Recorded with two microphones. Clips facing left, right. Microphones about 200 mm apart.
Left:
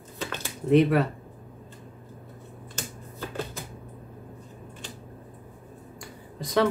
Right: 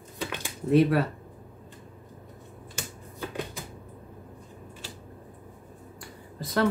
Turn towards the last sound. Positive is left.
turn(degrees=0)  # may be behind; listen again after turning